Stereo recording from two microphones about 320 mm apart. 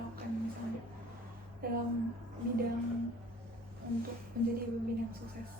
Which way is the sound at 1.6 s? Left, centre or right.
Right.